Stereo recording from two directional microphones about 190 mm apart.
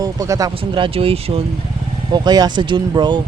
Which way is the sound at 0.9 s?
30° right (ahead or behind).